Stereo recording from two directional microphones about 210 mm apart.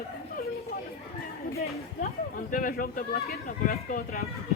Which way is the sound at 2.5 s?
40° left (ahead or behind).